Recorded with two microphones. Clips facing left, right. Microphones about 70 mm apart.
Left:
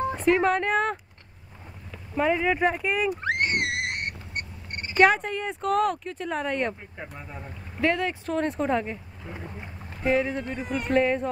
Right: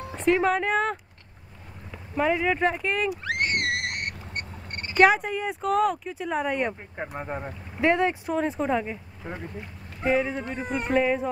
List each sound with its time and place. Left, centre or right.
0.1 s speech: centre
2.1 s speech: centre
3.1 s frog: left
4.9 s speech: centre
7.2 s speech: right
7.8 s speech: right
8.3 s speech: centre
10.0 s speech: centre
10.6 s speech: centre
10.9 s speech: centre